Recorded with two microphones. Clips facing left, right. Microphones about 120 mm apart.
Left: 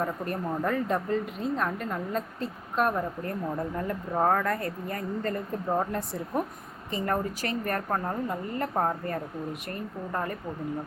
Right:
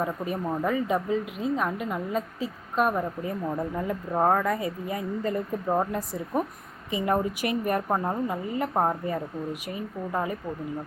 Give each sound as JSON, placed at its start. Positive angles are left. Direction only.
{"t": 0.0, "sound": "a woman's voice", "side_deg": -5}
{"t": 8.7, "sound": "a woman's voice", "side_deg": -20}
{"t": 9.0, "sound": "speech", "side_deg": -5}